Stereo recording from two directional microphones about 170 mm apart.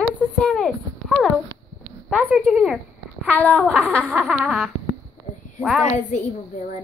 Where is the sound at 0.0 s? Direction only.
5° left (ahead or behind).